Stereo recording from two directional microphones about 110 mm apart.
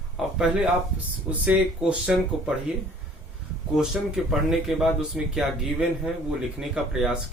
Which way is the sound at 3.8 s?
5° right (ahead or behind).